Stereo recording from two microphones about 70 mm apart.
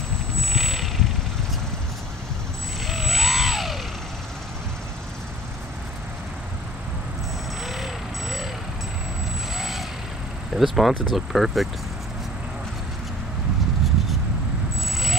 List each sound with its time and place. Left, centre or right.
0.4 s vehicle: centre
2.9 s vehicle: centre
7.6 s vehicle: centre
9.6 s vehicle: centre
10.5 s speech: centre